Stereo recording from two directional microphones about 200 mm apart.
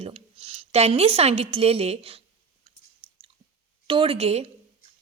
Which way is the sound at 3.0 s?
25° right (ahead or behind).